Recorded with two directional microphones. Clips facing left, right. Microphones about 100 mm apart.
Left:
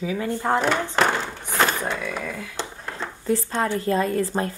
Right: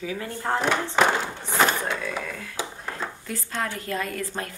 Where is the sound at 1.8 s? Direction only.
5° left (ahead or behind).